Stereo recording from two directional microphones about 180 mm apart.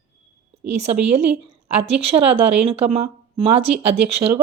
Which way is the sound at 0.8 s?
35° right (ahead or behind).